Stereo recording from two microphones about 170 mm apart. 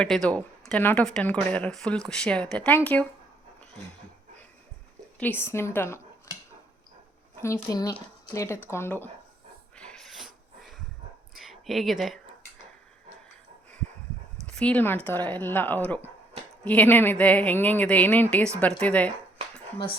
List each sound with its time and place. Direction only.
0.0 s speech: 5° left (ahead or behind)
5.2 s speech: 15° left (ahead or behind)
7.4 s speech: 20° left (ahead or behind)
9.7 s a sound: 5° left (ahead or behind)
11.3 s speech: centre (ahead or behind)
14.4 s speech: 5° left (ahead or behind)